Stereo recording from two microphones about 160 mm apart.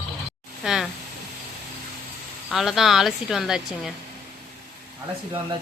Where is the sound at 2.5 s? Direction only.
Centre (ahead or behind).